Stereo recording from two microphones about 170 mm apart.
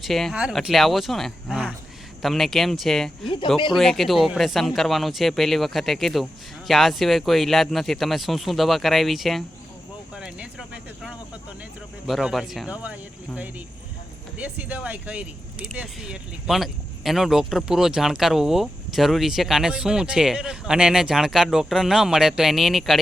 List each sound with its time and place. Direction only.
0.0 s speech: centre (ahead or behind)
3.2 s speech: 30° left (ahead or behind)
3.8 s speech: centre (ahead or behind)
10.2 s a sound: 5° right (ahead or behind)
12.0 s speech: centre (ahead or behind)